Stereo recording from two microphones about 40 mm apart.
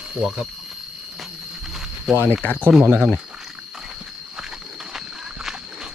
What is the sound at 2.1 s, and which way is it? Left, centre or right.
Speech, right.